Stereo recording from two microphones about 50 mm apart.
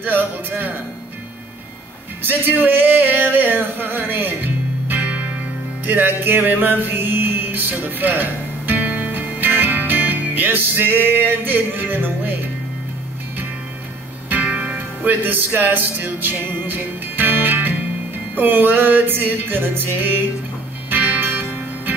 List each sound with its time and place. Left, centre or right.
0.0 s speech: right
2.2 s a sound: right
5.9 s music: right
14.3 s music: right